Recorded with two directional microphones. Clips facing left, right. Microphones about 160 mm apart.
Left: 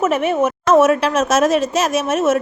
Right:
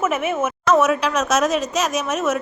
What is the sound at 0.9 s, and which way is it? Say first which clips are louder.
Speech: left 4 dB; 50° left (ahead or behind).